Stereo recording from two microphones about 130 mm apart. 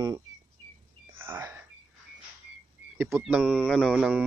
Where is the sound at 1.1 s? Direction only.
20° right (ahead or behind).